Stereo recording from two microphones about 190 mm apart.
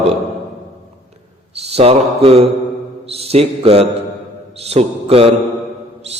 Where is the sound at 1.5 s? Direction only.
30° right (ahead or behind).